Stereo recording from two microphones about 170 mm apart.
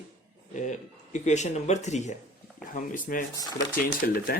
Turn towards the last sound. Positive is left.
turn(degrees=60)  # may be behind; listen again after turning